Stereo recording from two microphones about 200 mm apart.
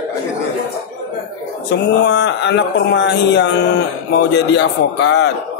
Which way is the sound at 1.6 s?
60° left (ahead or behind).